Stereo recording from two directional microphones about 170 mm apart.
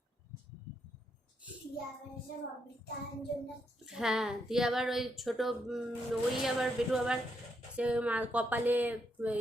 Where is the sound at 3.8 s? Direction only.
5° right (ahead or behind).